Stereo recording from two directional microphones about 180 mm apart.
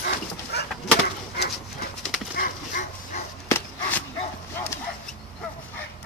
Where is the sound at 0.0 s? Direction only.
65° left (ahead or behind).